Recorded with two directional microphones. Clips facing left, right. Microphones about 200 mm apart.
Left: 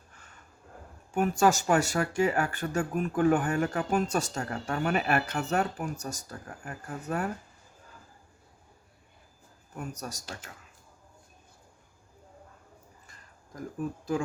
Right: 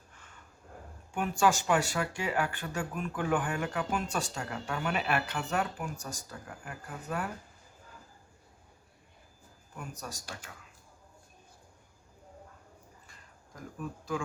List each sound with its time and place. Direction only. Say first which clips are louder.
1.1 s speech: left 4 dB; 40° left (ahead or behind)
9.7 s speech: left 5 dB; 40° left (ahead or behind)